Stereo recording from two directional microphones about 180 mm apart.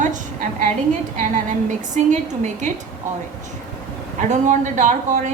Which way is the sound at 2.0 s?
40° right (ahead or behind).